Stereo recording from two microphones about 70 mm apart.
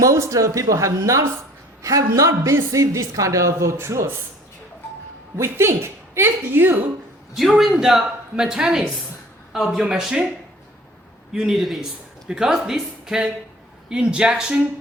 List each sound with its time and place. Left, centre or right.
0.0 s a man's voice: right
5.4 s a woman's voice: right
7.6 s speech: centre
11.3 s a man's voice: centre